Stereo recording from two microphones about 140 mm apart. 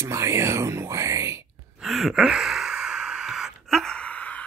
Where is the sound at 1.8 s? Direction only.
Centre (ahead or behind).